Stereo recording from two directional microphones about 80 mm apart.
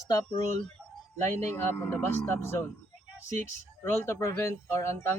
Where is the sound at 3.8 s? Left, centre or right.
Left.